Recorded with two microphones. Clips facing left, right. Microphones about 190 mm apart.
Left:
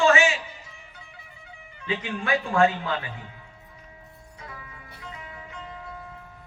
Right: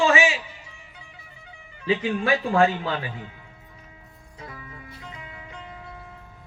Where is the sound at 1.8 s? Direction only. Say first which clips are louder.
Right 6 dB; 35° right (ahead or behind).